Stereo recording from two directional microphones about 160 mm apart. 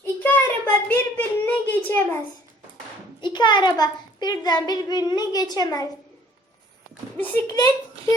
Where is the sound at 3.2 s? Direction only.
30° left (ahead or behind).